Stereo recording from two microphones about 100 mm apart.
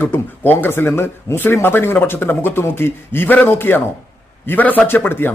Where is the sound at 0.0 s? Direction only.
20° left (ahead or behind).